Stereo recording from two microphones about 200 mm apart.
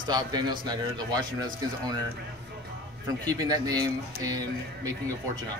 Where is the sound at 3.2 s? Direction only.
20° right (ahead or behind).